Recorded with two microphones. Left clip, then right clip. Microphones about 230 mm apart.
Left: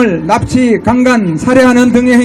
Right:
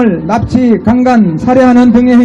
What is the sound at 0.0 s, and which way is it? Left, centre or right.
A woman's voice, left.